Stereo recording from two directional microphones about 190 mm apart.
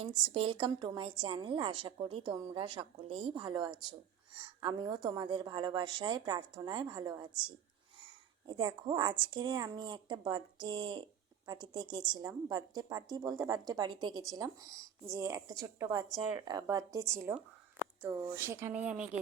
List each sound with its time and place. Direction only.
0.0 s a woman's voice: 30° right (ahead or behind); by 19.2 s 5° right (ahead or behind)